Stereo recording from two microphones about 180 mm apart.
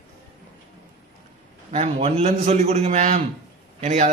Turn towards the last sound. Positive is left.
turn(degrees=-40)  # may be behind; listen again after turning